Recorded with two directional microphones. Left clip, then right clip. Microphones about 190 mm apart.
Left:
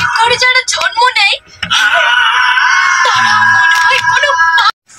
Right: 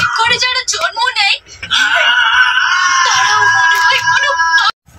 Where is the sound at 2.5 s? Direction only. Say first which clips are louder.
Left 2 dB; 45° left (ahead or behind).